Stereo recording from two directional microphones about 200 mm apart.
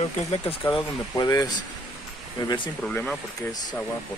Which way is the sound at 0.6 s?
20° left (ahead or behind).